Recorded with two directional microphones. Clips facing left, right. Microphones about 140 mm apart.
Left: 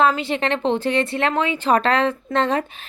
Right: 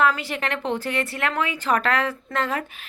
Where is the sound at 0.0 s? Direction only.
20° left (ahead or behind).